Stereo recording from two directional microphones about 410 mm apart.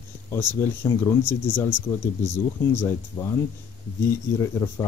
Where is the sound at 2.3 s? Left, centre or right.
Centre.